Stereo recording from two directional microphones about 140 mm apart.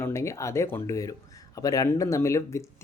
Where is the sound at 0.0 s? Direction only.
20° left (ahead or behind).